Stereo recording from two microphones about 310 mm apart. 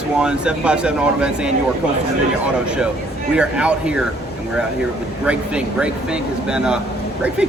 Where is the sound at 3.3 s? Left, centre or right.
Centre.